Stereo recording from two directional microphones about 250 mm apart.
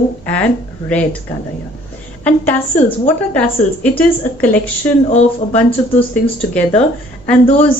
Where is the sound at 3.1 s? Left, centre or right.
Centre.